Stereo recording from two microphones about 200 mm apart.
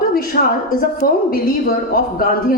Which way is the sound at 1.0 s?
45° left (ahead or behind).